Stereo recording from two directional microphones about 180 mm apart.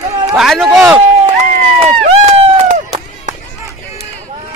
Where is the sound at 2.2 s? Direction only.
35° right (ahead or behind).